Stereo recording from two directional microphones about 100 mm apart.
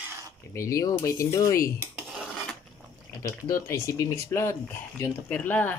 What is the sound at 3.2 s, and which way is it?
Speech, 30° left (ahead or behind).